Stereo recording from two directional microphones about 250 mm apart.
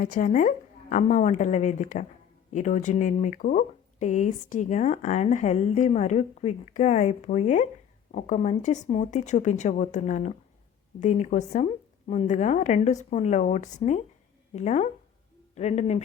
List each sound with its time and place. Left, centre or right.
0.0 s a woman's voice: left